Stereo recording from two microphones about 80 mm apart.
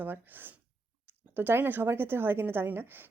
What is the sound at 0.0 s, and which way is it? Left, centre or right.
A woman's voice, right.